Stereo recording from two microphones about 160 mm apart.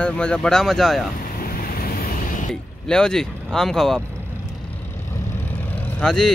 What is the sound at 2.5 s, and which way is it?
Speech, 5° left (ahead or behind).